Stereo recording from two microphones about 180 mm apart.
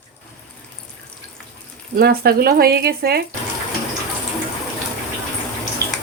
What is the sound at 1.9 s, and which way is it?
Speech, 55° right (ahead or behind).